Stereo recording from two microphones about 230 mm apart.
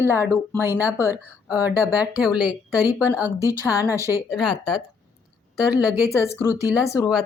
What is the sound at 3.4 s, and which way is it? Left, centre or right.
Speech, centre.